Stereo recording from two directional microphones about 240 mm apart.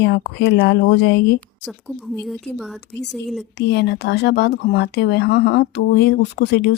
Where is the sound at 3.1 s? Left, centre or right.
Centre.